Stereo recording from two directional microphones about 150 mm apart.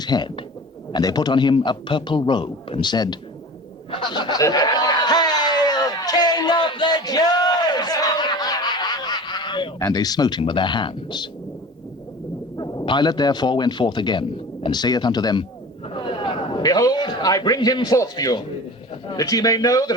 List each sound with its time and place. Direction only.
0.0 s a man's voice: 30° left (ahead or behind)
3.9 s a sound: 30° left (ahead or behind)
12.5 s a man's voice: 25° left (ahead or behind)